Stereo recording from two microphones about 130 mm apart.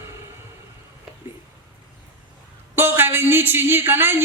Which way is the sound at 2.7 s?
15° right (ahead or behind).